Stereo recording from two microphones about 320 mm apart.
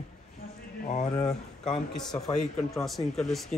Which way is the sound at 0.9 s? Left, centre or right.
Left.